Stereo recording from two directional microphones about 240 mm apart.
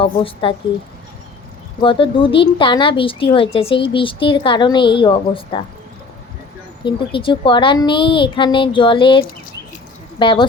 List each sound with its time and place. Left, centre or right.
0.0 s speech: left
1.8 s speech: left
6.8 s speech: left